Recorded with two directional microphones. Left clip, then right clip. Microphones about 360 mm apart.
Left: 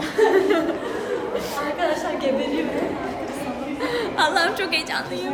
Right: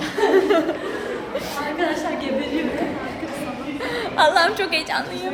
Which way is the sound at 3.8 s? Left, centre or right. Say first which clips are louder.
Right 3 dB; centre.